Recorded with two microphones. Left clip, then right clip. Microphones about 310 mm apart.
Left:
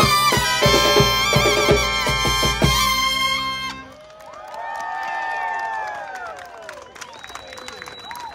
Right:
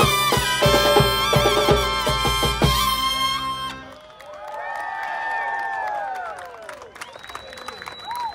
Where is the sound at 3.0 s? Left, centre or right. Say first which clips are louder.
Left 2 dB; right.